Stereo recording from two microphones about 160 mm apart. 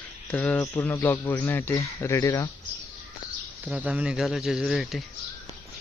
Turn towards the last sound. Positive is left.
turn(degrees=0)  # may be behind; listen again after turning